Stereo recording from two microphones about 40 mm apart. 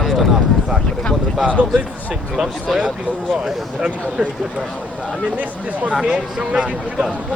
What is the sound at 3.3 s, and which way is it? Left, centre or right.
Speech, centre.